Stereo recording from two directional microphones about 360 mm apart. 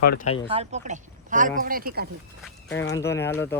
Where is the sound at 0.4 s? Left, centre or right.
Centre.